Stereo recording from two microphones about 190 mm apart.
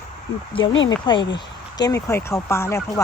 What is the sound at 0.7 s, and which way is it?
Speech, 90° left.